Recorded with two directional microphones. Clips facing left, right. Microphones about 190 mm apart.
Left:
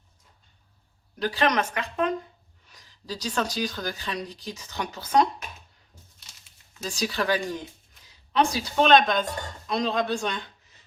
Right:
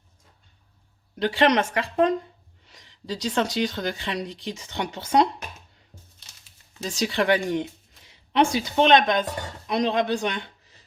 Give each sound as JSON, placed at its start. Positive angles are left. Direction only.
{"t": 1.2, "sound": "speech", "side_deg": -25}
{"t": 6.7, "sound": "speech", "side_deg": -25}